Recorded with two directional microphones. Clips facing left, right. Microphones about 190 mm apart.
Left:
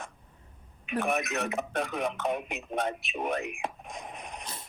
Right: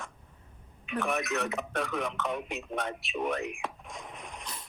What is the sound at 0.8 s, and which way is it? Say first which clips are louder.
Speech: left 2 dB; 20° left (ahead or behind).